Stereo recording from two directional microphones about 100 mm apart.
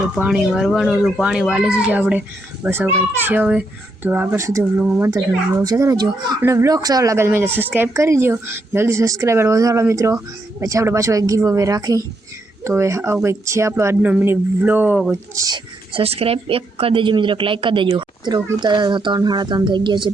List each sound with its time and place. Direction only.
0.3 s a child's voice: 5° right (ahead or behind); by 4.4 s 20° right (ahead or behind)
5.1 s speech: 35° right (ahead or behind)
6.4 s a child's voice: 30° right (ahead or behind)
15.5 s speech: 65° right (ahead or behind)
18.3 s speech: 45° right (ahead or behind)